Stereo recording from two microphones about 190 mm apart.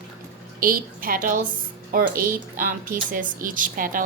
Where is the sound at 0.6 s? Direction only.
50° right (ahead or behind).